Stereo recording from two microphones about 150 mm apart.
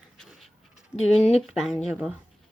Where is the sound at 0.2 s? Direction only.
Centre (ahead or behind).